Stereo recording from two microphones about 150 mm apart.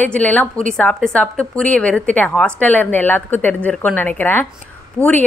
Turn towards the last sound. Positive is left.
turn(degrees=15)  # may be behind; listen again after turning